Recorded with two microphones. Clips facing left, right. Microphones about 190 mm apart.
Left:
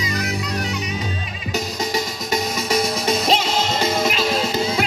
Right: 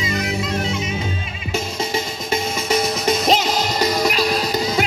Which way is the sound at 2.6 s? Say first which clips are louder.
Right 2 dB; 35° left (ahead or behind).